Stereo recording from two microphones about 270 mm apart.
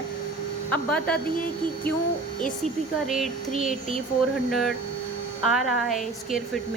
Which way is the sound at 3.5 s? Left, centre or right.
Right.